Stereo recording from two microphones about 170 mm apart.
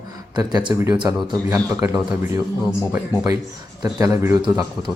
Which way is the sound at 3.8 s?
20° right (ahead or behind).